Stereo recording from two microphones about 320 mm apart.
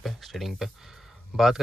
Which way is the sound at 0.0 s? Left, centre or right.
Centre.